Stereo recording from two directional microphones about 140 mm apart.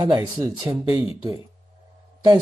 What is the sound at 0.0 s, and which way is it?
Speech, 30° right (ahead or behind).